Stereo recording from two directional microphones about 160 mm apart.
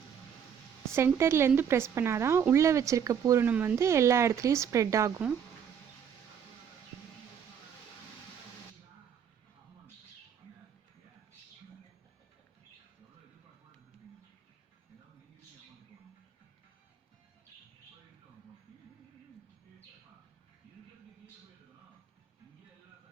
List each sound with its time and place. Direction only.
0.9 s a woman's voice: 15° right (ahead or behind)